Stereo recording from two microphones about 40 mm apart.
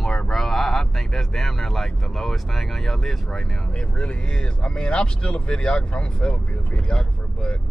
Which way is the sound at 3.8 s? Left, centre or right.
Left.